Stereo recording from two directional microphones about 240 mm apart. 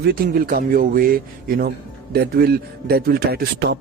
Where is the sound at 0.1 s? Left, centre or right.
Right.